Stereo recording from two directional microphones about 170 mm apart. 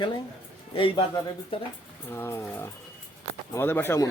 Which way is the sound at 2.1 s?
15° left (ahead or behind).